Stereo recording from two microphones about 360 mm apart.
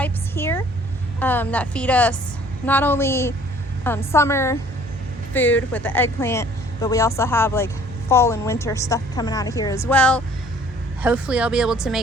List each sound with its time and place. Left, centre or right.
0.0 s vehicle: centre
1.2 s a woman's voice: centre